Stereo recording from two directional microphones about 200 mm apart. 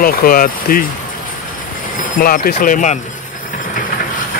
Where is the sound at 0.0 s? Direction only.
45° left (ahead or behind).